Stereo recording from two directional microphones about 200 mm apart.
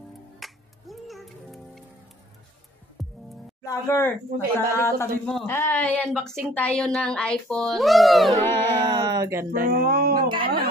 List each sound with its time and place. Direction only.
0.4 s music: centre (ahead or behind)
3.0 s music: centre (ahead or behind)
3.6 s speech: 15° left (ahead or behind)
5.2 s a child's voice: centre (ahead or behind)
8.4 s a sound: 25° right (ahead or behind)
9.6 s speech: 45° right (ahead or behind)
10.2 s speech: 25° right (ahead or behind)